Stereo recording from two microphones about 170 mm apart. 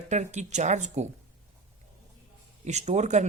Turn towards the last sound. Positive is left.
turn(degrees=-40)  # may be behind; listen again after turning